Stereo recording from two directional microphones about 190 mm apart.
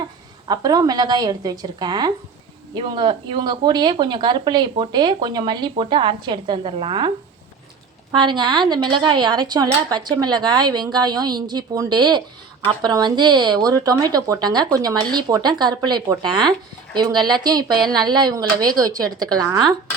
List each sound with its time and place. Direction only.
0.4 s speech: 20° right (ahead or behind)
8.1 s speech: 25° right (ahead or behind)